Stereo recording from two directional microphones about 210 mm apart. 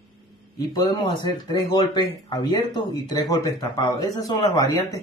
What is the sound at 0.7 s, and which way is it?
Speech, 20° left (ahead or behind).